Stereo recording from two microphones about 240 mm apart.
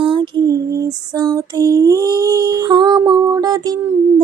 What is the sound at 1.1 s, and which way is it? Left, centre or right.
Female singing, centre.